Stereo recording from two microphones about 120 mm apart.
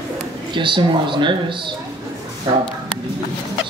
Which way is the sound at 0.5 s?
40° right (ahead or behind).